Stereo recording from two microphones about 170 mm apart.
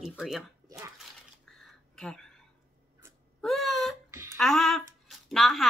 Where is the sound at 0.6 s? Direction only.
20° right (ahead or behind).